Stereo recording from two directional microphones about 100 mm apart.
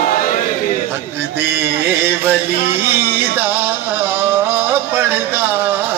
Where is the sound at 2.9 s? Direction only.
20° right (ahead or behind).